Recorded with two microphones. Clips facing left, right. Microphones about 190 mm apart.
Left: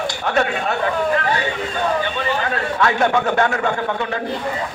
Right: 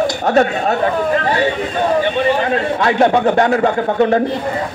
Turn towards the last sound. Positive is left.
turn(degrees=-40)  # may be behind; listen again after turning